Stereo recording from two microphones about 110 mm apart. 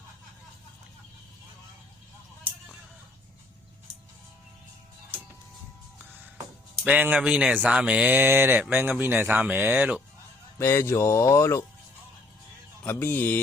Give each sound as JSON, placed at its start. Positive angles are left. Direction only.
{"t": 6.8, "sound": "speech", "side_deg": -15}
{"t": 10.6, "sound": "speech", "side_deg": 25}
{"t": 12.8, "sound": "mantra", "side_deg": 20}